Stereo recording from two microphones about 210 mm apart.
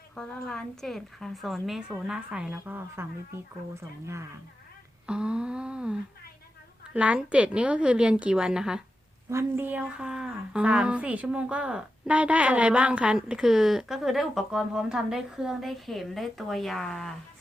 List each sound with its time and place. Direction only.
0.2 s a woman's voice: 5° left (ahead or behind)
5.0 s a woman's voice: 5° right (ahead or behind)